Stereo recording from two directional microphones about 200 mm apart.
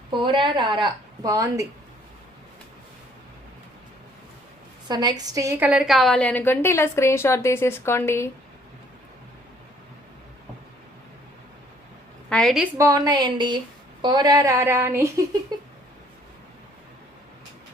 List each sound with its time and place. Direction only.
0.1 s a woman's voice: 25° right (ahead or behind)
4.9 s a woman's voice: 20° right (ahead or behind); by 8.3 s 15° left (ahead or behind)
12.3 s a woman's voice: centre (ahead or behind)
12.7 s a woman's voice: 15° right (ahead or behind)
15.5 s a sound: 20° right (ahead or behind)